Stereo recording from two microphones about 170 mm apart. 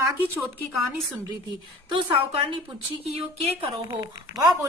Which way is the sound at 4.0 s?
20° right (ahead or behind).